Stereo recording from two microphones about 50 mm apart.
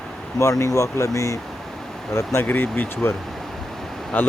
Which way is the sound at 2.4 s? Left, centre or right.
Left.